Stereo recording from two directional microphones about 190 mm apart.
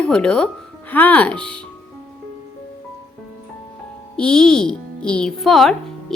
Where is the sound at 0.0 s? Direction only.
5° left (ahead or behind).